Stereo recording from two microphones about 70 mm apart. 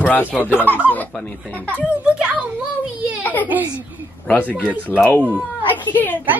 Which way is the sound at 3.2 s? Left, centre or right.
Left.